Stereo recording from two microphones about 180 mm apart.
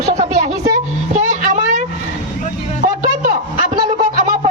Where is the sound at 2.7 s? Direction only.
45° right (ahead or behind).